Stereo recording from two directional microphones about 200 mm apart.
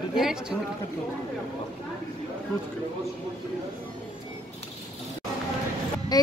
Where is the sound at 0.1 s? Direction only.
5° right (ahead or behind).